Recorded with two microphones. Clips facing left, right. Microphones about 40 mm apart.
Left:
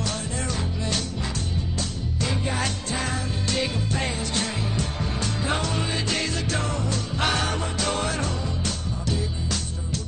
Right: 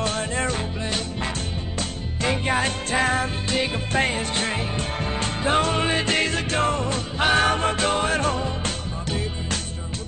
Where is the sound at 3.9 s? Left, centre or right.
Right.